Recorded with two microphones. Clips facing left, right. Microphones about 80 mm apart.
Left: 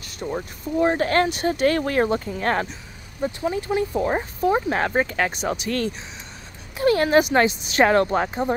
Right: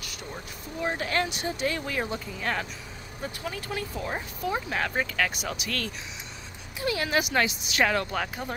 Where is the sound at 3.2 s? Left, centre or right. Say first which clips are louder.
Left 11 dB; left.